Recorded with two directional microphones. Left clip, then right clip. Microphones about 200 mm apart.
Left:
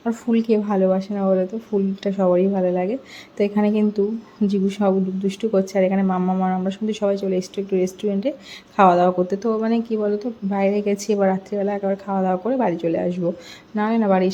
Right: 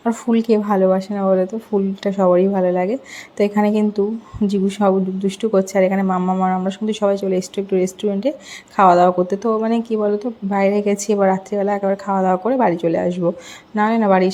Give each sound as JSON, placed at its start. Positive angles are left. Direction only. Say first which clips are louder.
{"t": 0.0, "sound": "speech", "louder": "right 3 dB", "side_deg": 0}